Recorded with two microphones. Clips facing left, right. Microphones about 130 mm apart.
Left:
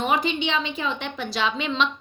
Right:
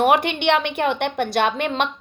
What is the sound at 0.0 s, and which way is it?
A woman's voice, 65° right (ahead or behind).